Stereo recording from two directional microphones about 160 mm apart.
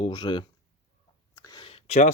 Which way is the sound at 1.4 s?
30° left (ahead or behind).